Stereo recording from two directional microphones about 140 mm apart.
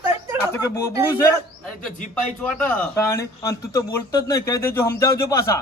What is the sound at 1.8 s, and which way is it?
A man's voice, 5° left (ahead or behind).